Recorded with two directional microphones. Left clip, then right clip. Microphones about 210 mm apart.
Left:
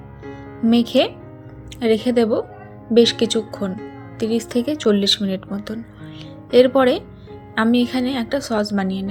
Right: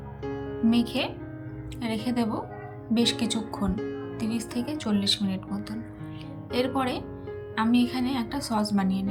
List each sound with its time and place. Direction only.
0.7 s a woman's voice: 15° left (ahead or behind)